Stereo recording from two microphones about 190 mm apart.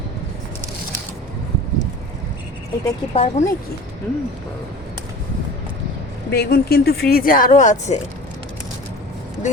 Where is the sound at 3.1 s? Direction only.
35° left (ahead or behind).